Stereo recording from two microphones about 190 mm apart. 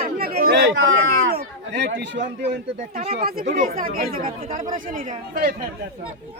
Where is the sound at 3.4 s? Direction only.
40° right (ahead or behind).